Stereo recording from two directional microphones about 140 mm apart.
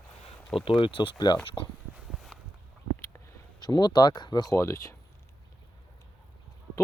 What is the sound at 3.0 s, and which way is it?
Speech, 25° left (ahead or behind).